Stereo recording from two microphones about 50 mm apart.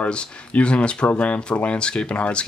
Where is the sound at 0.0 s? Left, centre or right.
Left.